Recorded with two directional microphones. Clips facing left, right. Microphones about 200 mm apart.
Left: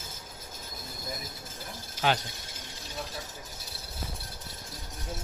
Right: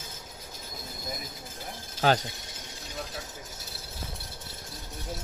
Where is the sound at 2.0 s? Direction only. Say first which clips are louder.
Right 4 dB; 40° right (ahead or behind).